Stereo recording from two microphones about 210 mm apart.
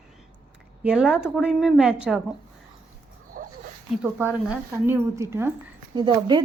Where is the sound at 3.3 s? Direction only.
45° right (ahead or behind).